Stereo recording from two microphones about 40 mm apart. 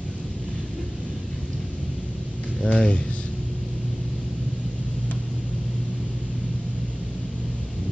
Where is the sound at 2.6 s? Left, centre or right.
Left.